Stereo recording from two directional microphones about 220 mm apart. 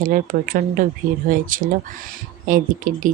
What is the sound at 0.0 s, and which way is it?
Speech, 35° right (ahead or behind).